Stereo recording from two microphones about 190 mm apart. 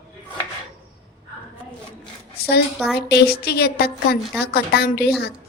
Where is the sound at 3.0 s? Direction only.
60° left (ahead or behind).